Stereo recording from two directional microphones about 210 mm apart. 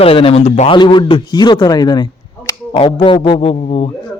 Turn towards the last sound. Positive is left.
turn(degrees=30)  # may be behind; listen again after turning